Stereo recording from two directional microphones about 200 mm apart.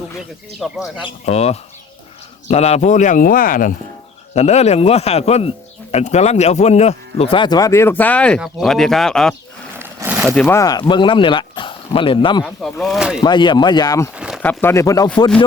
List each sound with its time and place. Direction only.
0.6 s speech: centre (ahead or behind)
1.0 s speech: 30° left (ahead or behind)
4.4 s speech: 35° left (ahead or behind); by 9.3 s centre (ahead or behind)
9.7 s a sound: 10° right (ahead or behind)
10.4 s speech: 15° left (ahead or behind)
12.8 s speech: centre (ahead or behind)
13.2 s speech: 20° left (ahead or behind)
14.2 s a sound: 5° right (ahead or behind)
14.4 s speech: 10° left (ahead or behind)